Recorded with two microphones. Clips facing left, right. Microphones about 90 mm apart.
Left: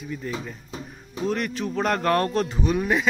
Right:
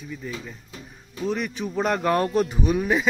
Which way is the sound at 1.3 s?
5° right (ahead or behind).